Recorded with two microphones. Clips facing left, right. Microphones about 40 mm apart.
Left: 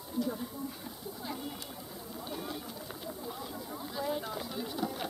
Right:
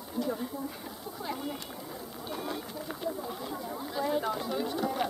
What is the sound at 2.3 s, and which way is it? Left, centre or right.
Run, centre.